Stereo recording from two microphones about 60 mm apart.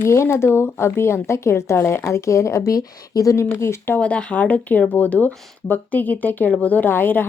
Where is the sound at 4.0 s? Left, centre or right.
Centre.